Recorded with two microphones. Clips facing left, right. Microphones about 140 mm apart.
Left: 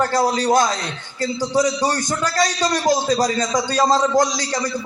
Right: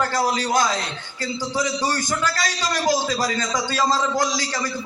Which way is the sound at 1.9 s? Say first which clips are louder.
Left 3 dB; 20° left (ahead or behind).